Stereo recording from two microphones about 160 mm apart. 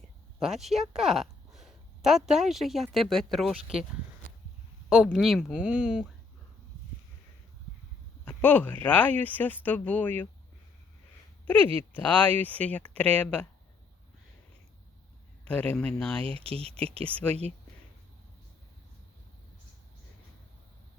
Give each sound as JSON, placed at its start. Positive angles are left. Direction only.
{"t": 0.6, "sound": "a woman's voice", "side_deg": 0}
{"t": 4.9, "sound": "speech", "side_deg": -5}
{"t": 8.2, "sound": "speech", "side_deg": 10}
{"t": 11.9, "sound": "speech", "side_deg": 10}
{"t": 15.4, "sound": "speech", "side_deg": 10}
{"t": 16.4, "sound": "speech", "side_deg": -35}